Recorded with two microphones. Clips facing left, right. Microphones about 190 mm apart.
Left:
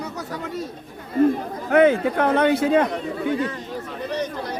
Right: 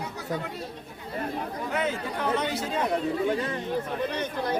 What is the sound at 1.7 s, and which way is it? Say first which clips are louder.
A man's voice: left 15 dB; 60° left (ahead or behind).